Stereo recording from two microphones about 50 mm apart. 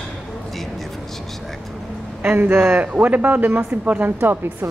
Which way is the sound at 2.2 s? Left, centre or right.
Right.